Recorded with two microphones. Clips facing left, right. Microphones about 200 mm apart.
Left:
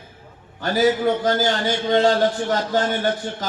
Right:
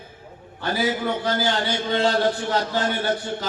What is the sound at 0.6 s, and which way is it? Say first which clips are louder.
A man's voice: left 6 dB; 45° left (ahead or behind).